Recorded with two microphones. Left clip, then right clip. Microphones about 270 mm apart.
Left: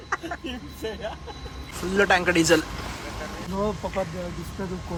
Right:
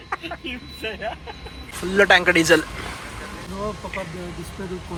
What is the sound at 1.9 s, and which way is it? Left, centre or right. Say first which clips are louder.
Speech: right 5 dB; centre.